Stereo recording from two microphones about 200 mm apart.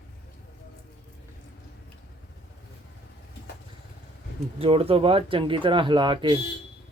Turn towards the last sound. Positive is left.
turn(degrees=-25)  # may be behind; listen again after turning